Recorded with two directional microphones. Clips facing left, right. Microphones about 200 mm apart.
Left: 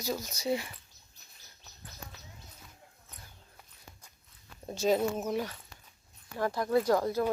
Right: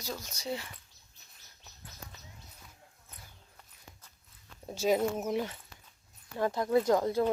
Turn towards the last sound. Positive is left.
turn(degrees=-20)  # may be behind; listen again after turning